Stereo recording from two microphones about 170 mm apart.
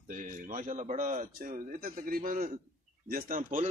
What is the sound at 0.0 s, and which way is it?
A man's voice, 50° right (ahead or behind).